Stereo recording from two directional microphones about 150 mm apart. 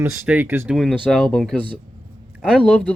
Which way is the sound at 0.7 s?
Centre (ahead or behind).